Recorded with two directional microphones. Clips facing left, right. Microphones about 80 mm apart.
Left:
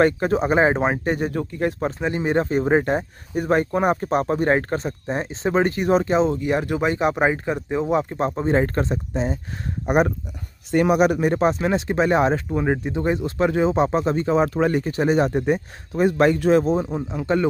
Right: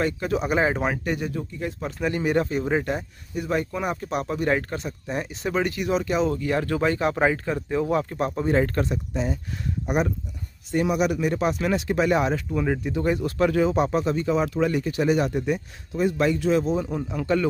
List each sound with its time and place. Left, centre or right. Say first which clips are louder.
0.0 s speech: left 6 dB; left
1.3 s speech: left 7 dB; left
2.0 s speech: right 2 dB; left
9.8 s a man's voice: left 6 dB; left
10.7 s speech: left 5 dB; left
11.0 s speech: left 5 dB; left
15.9 s a man's voice: left 5 dB; left
16.8 s speech: left 2 dB; left